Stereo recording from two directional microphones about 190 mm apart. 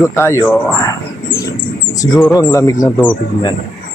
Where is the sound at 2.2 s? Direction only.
20° left (ahead or behind).